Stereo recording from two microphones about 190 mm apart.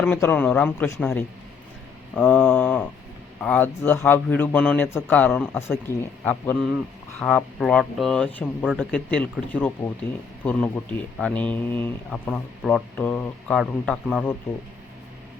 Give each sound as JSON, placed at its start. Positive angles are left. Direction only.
{"t": 0.0, "sound": "a man's voice", "side_deg": 10}